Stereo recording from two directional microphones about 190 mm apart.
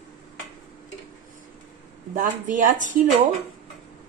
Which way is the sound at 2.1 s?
40° right (ahead or behind).